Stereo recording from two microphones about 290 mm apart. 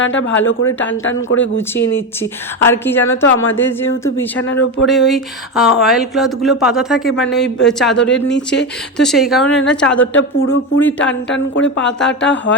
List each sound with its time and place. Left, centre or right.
0.0 s speech: left
1.5 s speech: centre
4.4 s speech: left
4.9 s speech: centre
9.5 s speech: left
11.9 s speech: centre
12.2 s speech: left